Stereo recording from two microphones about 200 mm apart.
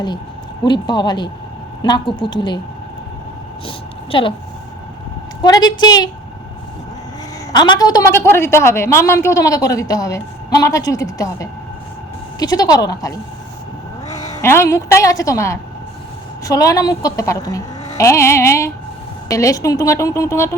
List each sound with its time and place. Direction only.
0.6 s speech: 20° left (ahead or behind)
3.7 s a woman's voice: 25° left (ahead or behind)
5.4 s speech: 20° left (ahead or behind)
7.5 s a woman's voice: 20° left (ahead or behind)